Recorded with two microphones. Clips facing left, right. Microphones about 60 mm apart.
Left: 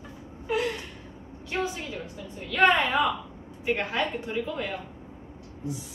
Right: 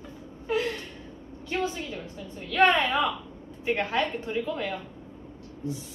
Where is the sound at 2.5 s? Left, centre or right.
Left.